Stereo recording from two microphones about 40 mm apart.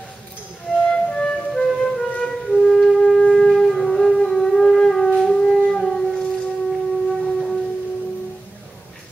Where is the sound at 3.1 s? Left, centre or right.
Centre.